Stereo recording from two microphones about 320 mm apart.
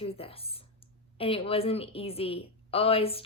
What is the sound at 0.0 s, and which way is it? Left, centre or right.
Speech, centre.